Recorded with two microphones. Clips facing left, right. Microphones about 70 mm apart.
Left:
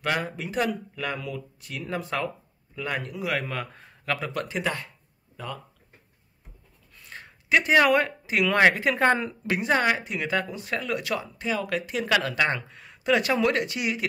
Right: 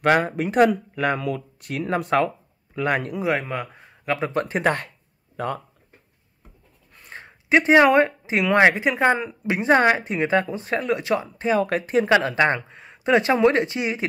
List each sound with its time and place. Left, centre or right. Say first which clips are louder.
0.0 s speech: right 9 dB; right
3.3 s speech: right 4 dB; right
4.3 s speech: right 7 dB; right
7.1 s speech: right 4 dB; right; by 9.3 s centre
9.5 s speech: right 6 dB; right